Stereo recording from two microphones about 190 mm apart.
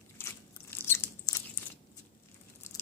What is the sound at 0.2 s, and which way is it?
Biting, 10° left (ahead or behind).